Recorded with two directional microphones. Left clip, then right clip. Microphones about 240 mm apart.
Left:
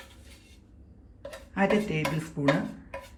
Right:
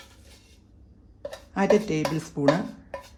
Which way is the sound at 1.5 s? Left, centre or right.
Centre.